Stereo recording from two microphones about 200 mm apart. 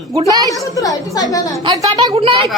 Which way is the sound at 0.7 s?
20° left (ahead or behind).